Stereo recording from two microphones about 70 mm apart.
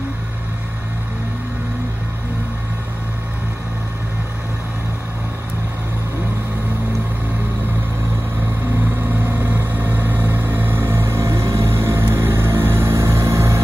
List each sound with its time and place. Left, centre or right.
9.2 s vehicle: right